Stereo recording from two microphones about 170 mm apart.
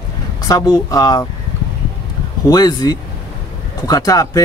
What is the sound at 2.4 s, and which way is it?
Speech, 20° left (ahead or behind).